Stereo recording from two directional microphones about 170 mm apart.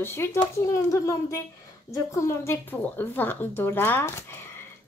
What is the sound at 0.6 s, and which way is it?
Child singing, 15° left (ahead or behind).